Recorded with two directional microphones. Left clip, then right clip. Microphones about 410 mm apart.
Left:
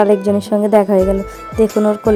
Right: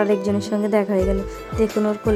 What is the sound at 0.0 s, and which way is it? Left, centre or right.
Speech, centre.